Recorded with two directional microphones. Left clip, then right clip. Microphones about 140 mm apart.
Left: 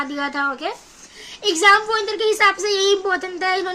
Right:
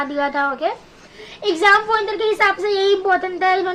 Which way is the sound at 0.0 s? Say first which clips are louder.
Right 3 dB; 15° left (ahead or behind).